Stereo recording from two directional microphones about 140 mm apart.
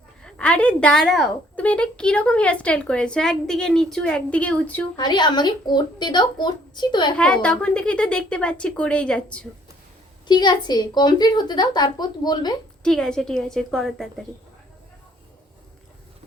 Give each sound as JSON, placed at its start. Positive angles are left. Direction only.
{"t": 0.2, "sound": "a woman's voice", "side_deg": 5}
{"t": 4.9, "sound": "a woman's voice", "side_deg": 30}
{"t": 7.2, "sound": "a woman's voice", "side_deg": 5}
{"t": 10.2, "sound": "a woman's voice", "side_deg": 30}
{"t": 12.8, "sound": "a woman's voice", "side_deg": 5}